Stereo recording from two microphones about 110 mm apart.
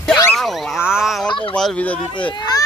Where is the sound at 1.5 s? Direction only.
10° left (ahead or behind).